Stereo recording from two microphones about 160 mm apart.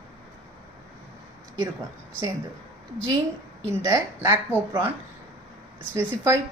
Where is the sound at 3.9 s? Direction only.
15° right (ahead or behind).